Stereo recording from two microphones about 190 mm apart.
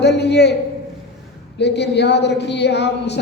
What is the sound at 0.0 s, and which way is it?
Speech, 60° left (ahead or behind).